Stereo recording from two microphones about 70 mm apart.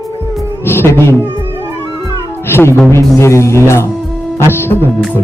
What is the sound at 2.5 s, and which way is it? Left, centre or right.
Music, left.